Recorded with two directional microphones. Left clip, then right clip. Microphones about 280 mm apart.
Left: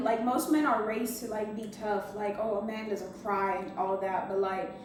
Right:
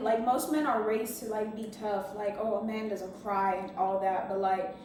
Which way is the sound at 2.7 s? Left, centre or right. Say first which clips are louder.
Even; centre.